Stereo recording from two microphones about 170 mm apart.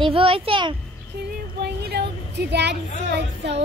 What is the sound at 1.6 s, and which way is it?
A woman's voice, 75° right (ahead or behind).